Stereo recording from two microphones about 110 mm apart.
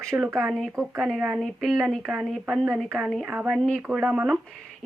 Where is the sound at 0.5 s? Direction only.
5° left (ahead or behind).